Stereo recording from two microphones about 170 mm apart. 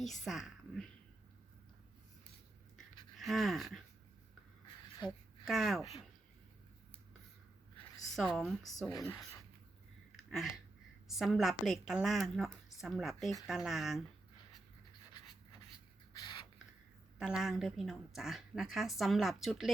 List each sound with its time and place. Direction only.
0.0 s a woman's voice: centre (ahead or behind)
3.2 s pant: centre (ahead or behind)
4.9 s a sound: 25° left (ahead or behind)
5.5 s a woman's voice: centre (ahead or behind)
8.1 s a woman's voice: centre (ahead or behind)
8.9 s speech: 20° left (ahead or behind)
10.2 s a sound: centre (ahead or behind)
11.1 s a woman's voice: centre (ahead or behind)
16.1 s a sound: 30° left (ahead or behind)
17.2 s a woman's voice: 5° right (ahead or behind)